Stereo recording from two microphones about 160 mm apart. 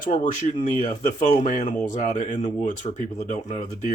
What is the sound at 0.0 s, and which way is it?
Speech, 50° left (ahead or behind).